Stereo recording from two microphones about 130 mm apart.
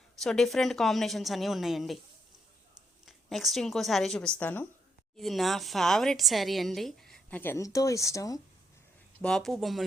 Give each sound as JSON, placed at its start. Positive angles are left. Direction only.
{"t": 0.2, "sound": "speech", "side_deg": 5}
{"t": 3.1, "sound": "a woman's voice", "side_deg": 0}
{"t": 5.1, "sound": "speech", "side_deg": 0}
{"t": 7.6, "sound": "speech", "side_deg": 25}
{"t": 9.2, "sound": "speech", "side_deg": 5}